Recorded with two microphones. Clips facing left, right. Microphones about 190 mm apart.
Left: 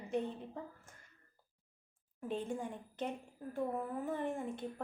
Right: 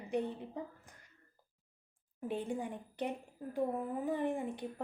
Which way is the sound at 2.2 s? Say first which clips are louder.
Right 2 dB; 15° right (ahead or behind).